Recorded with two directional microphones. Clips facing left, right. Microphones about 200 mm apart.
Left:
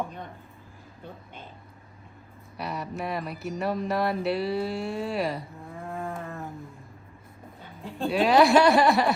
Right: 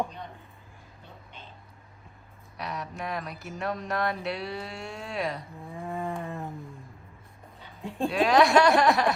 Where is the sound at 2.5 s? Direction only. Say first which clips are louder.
Left 3 dB; 5° left (ahead or behind).